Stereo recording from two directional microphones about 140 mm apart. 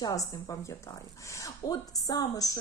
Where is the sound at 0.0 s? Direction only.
25° left (ahead or behind).